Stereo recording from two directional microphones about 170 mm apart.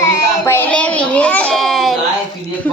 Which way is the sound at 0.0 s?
15° left (ahead or behind).